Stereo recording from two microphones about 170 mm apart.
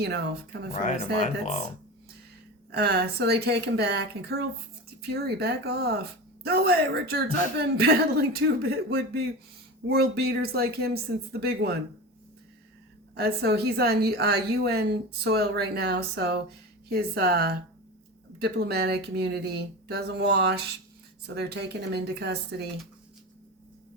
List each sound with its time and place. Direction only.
0.0 s speech: 80° right
0.7 s speech: 45° left (ahead or behind)
2.7 s a woman's voice: 70° right (ahead or behind)
13.1 s a woman's voice: 70° right (ahead or behind)